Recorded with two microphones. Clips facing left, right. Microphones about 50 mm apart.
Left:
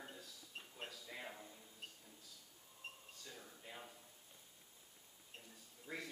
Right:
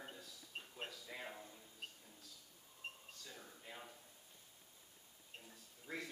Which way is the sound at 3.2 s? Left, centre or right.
Centre.